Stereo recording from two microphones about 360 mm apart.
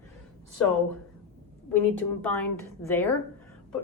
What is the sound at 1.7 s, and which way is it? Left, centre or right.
A woman's voice, centre.